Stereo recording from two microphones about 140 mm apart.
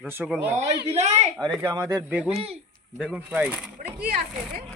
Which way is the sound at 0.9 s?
50° right (ahead or behind).